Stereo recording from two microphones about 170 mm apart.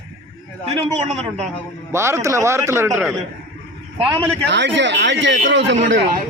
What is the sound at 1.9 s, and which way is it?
Speech, 15° right (ahead or behind).